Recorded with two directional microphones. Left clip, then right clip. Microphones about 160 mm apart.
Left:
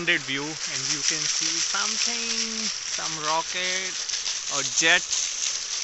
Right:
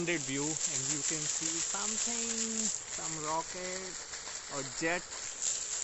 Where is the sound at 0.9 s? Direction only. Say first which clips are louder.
Left 11 dB; 35° right (ahead or behind).